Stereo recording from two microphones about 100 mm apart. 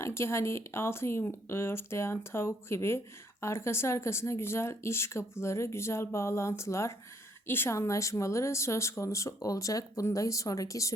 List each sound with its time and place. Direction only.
0.0 s speech: 25° left (ahead or behind)